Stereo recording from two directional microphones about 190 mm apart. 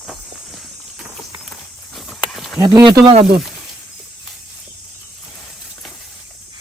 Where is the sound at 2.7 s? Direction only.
20° right (ahead or behind).